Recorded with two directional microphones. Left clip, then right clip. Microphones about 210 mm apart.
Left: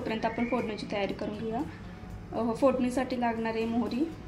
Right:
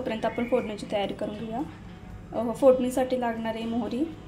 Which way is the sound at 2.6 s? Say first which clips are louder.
Right 7 dB; 5° right (ahead or behind).